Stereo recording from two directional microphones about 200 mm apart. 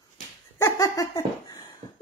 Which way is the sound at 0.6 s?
15° left (ahead or behind).